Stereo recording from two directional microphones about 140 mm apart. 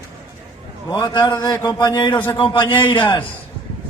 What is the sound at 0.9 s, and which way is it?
A man's voice, 30° left (ahead or behind).